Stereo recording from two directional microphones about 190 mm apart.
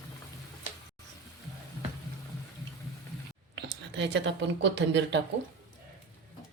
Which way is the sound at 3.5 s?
65° right (ahead or behind).